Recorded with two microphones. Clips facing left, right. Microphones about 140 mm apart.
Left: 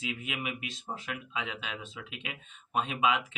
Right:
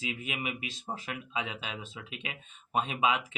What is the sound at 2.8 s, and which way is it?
Speech, 35° right (ahead or behind).